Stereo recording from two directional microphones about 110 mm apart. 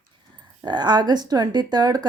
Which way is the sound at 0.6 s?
40° right (ahead or behind).